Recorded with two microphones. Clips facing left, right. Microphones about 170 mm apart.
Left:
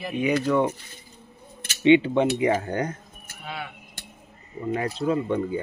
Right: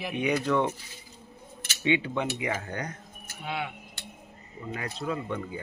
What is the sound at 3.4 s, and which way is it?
Speech, 20° right (ahead or behind).